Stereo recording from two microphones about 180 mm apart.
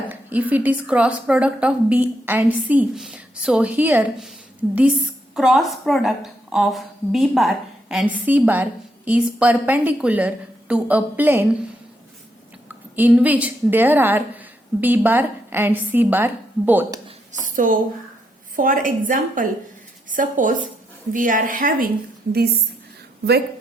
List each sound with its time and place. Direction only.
0.1 s a woman's voice: 10° right (ahead or behind)
12.6 s a woman's voice: 10° right (ahead or behind)
17.4 s a woman's voice: 50° right (ahead or behind)